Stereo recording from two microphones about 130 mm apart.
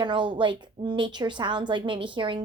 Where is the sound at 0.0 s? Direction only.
35° right (ahead or behind).